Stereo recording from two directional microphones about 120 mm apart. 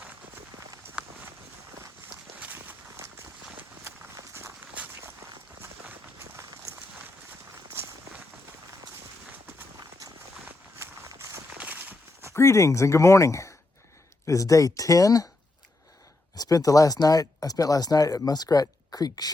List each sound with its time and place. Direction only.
0.9 s run: 15° right (ahead or behind)
2.4 s walk: 15° right (ahead or behind)
3.6 s run: 25° right (ahead or behind)
4.7 s walk: 15° right (ahead or behind)
10.4 s a sound: 20° right (ahead or behind)
12.3 s speech: 20° left (ahead or behind)
16.3 s speech: 30° left (ahead or behind)